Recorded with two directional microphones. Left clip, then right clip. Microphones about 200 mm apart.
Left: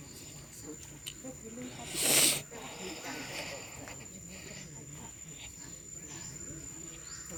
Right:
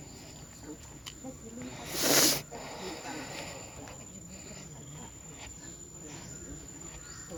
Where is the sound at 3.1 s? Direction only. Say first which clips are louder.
Even; 10° right (ahead or behind).